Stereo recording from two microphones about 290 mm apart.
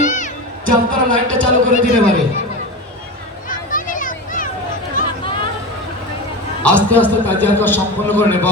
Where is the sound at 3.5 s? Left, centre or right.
Left.